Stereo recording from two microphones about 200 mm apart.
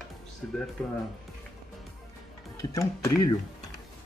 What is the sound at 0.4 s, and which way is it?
Speech, centre (ahead or behind).